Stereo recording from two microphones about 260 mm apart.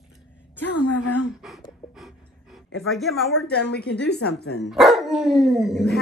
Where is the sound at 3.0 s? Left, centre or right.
Centre.